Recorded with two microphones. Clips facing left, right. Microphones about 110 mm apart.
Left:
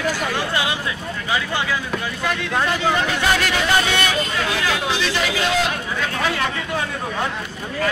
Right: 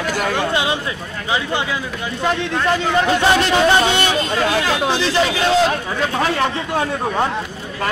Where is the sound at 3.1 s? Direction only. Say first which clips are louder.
Right 5 dB; 25° right (ahead or behind).